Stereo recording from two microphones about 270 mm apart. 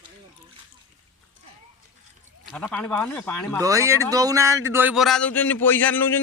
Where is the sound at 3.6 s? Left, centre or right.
Centre.